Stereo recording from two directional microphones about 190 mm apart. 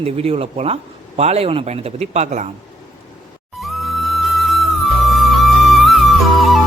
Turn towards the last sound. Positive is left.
turn(degrees=0)  # may be behind; listen again after turning